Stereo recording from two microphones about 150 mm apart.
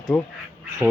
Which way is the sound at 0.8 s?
10° right (ahead or behind).